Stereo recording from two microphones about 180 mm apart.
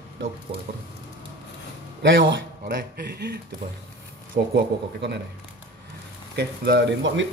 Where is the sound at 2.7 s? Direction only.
60° right (ahead or behind).